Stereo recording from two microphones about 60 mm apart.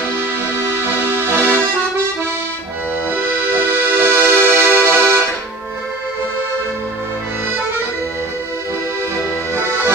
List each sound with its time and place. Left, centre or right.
0.7 s accordion: right
3.1 s accordion: right